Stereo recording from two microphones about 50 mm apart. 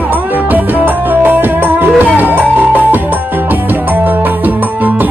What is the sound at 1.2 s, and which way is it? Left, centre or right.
Music, right.